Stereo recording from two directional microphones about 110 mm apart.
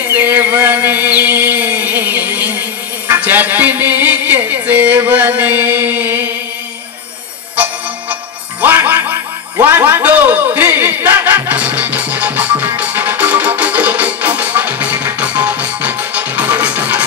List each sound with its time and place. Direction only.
0.1 s a sound: 15° right (ahead or behind)
3.1 s music: 20° right (ahead or behind)
8.1 s music: 15° right (ahead or behind)